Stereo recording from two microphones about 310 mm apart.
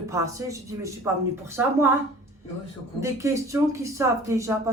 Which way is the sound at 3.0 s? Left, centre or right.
Centre.